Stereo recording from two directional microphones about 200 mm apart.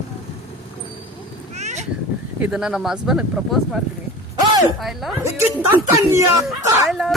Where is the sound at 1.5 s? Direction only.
35° right (ahead or behind).